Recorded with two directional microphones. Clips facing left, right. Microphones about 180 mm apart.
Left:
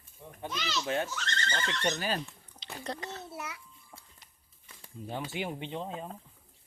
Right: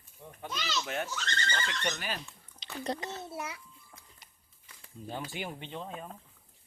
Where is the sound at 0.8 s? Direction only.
30° left (ahead or behind).